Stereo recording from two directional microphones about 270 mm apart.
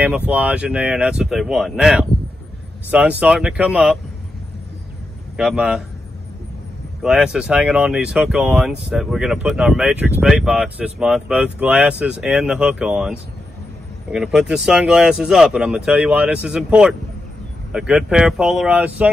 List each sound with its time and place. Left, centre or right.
0.0 s speech: centre
5.4 s speech: centre
7.0 s speech: centre